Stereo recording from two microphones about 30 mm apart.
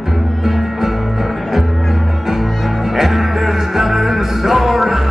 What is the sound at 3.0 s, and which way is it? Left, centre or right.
Music, centre.